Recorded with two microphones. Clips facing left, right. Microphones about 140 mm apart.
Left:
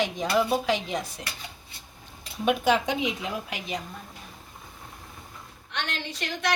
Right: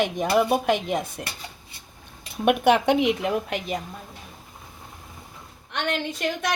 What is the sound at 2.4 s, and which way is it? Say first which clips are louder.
Speech: right 4 dB; 60° right (ahead or behind).